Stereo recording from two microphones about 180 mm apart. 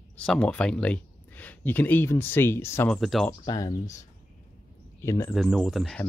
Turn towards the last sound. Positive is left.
turn(degrees=0)  # may be behind; listen again after turning